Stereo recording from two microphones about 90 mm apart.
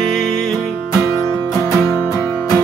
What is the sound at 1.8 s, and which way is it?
Music, 25° left (ahead or behind).